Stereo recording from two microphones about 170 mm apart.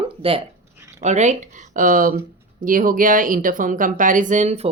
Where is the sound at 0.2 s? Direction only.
35° right (ahead or behind).